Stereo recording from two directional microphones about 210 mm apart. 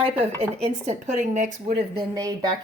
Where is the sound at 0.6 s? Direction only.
30° right (ahead or behind).